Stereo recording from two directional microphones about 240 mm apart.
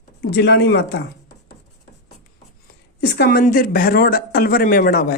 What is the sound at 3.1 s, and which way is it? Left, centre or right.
Speech, left.